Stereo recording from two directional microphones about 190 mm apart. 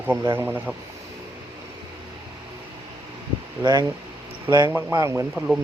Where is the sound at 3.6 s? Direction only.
20° right (ahead or behind).